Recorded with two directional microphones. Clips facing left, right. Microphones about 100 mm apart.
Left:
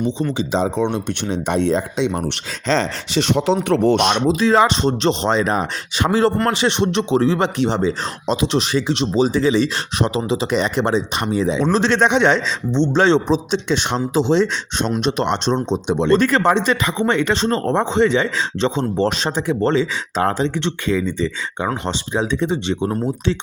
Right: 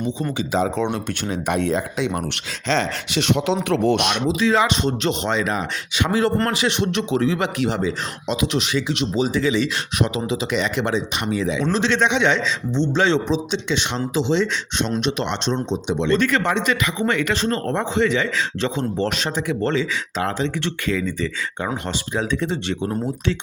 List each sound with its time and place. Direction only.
0.3 s speech: 30° left (ahead or behind)
20.7 s speech: 25° left (ahead or behind)